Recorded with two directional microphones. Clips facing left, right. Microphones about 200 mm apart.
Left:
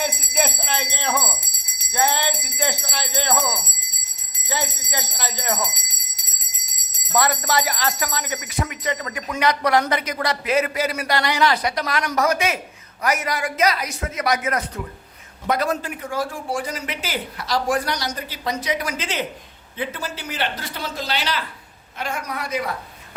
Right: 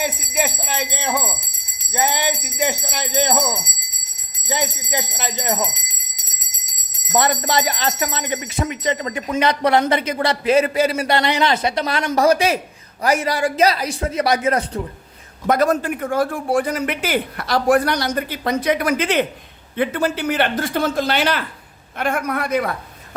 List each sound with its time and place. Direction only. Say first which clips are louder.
0.0 s jingle bell: right 1 dB; 10° right (ahead or behind)
1.9 s speech: right 1 dB; 15° right (ahead or behind)
7.1 s a woman's voice: right 2 dB; 25° right (ahead or behind)
15.4 s speech: right 5 dB; 50° right (ahead or behind)